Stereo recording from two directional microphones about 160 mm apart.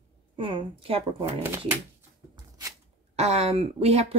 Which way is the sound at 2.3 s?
25° right (ahead or behind).